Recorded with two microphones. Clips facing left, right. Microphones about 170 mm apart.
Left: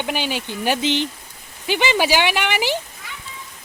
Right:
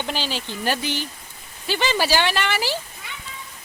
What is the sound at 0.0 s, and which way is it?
Speech, 15° left (ahead or behind).